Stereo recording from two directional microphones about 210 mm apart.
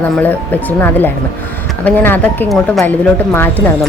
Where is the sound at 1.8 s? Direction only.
10° left (ahead or behind).